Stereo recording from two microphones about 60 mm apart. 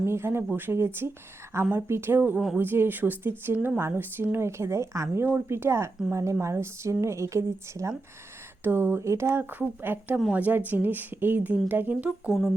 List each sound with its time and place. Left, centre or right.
0.0 s a woman's voice: right
8.6 s speech: right
9.4 s a woman's voice: right
12.3 s speech: centre